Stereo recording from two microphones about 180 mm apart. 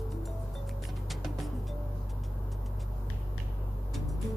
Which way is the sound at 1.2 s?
Centre (ahead or behind).